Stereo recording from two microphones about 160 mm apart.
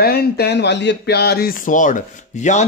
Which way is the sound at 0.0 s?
80° left.